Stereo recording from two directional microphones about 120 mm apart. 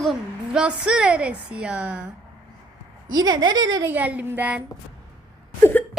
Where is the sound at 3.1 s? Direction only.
35° right (ahead or behind).